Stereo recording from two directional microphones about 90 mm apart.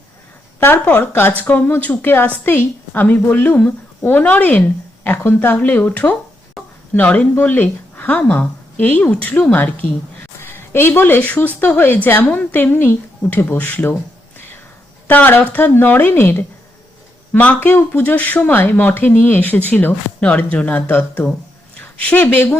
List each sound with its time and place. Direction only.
0.6 s a woman's voice: 20° left (ahead or behind)
6.6 s a sound: centre (ahead or behind)
6.9 s a woman's voice: 15° left (ahead or behind)
15.0 s a woman's voice: 20° left (ahead or behind)